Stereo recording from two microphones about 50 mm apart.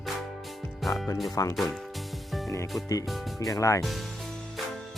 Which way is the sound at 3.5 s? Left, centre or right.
Left.